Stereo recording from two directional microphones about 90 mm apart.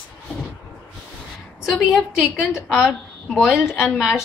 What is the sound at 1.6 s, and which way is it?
A woman's voice, 5° right (ahead or behind).